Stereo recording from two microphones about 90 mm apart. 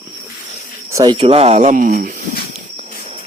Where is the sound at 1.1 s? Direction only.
90° right.